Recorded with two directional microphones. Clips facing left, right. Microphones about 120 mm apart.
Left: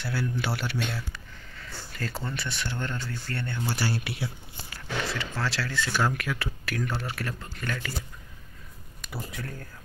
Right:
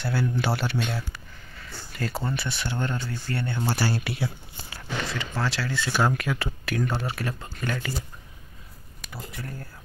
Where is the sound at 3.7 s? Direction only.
45° right (ahead or behind).